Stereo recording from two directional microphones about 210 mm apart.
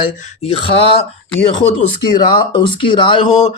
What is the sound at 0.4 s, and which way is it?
Speech, 25° left (ahead or behind).